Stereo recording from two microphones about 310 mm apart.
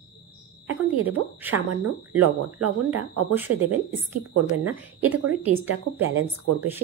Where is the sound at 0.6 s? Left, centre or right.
Right.